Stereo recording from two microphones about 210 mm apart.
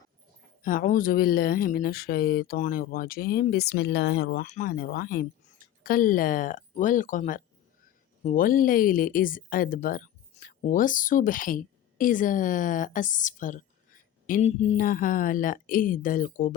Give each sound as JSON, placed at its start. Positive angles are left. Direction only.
{"t": 0.6, "sound": "speech", "side_deg": 40}
{"t": 4.4, "sound": "speech", "side_deg": 35}